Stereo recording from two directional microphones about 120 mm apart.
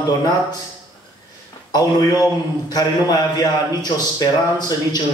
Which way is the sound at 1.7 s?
35° left (ahead or behind).